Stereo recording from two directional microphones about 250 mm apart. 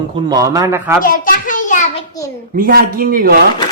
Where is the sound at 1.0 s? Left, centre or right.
Left.